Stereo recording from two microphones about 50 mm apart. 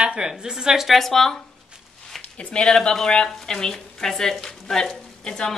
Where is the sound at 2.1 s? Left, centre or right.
Left.